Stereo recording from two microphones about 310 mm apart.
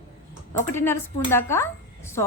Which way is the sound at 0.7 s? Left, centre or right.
Centre.